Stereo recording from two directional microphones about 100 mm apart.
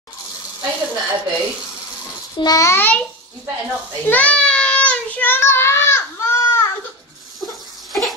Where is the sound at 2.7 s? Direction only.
20° left (ahead or behind).